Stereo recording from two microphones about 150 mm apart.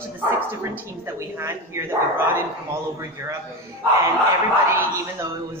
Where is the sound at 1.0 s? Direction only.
20° right (ahead or behind).